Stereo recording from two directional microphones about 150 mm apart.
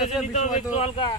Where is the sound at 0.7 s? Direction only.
35° left (ahead or behind).